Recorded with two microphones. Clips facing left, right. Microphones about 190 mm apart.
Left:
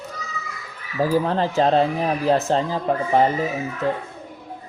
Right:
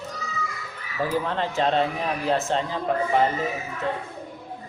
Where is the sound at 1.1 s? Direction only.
35° left (ahead or behind).